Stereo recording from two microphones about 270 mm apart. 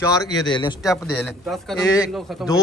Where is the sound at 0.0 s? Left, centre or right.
Centre.